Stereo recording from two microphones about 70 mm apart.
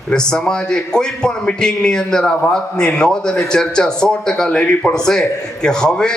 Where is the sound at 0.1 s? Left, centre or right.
Centre.